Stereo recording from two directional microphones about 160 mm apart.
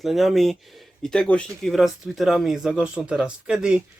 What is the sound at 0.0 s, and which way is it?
Speech, centre (ahead or behind).